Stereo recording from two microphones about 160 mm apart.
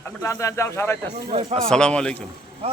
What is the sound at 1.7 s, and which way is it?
Speech, 5° left (ahead or behind).